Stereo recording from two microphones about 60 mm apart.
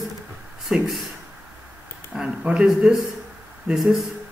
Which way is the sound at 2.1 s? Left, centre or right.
Centre.